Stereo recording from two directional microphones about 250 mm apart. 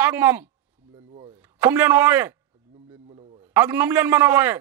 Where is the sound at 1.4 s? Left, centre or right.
Centre.